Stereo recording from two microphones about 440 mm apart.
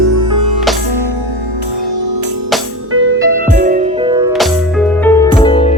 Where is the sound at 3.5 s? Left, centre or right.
Centre.